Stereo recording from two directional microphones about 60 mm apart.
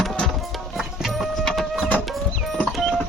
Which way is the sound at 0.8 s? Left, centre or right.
Centre.